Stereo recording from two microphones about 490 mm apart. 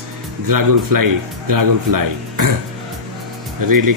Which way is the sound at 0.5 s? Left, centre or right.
Right.